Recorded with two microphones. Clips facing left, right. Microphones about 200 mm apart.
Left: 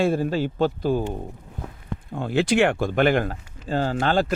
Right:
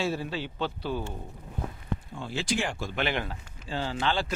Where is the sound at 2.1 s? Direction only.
55° left (ahead or behind).